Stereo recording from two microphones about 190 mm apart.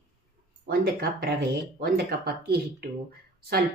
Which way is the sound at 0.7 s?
55° right (ahead or behind).